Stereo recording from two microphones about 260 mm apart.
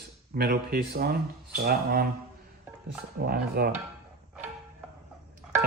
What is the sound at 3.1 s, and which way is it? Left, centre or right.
Speech, right.